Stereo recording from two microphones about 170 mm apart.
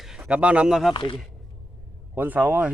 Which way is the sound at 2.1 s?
10° right (ahead or behind).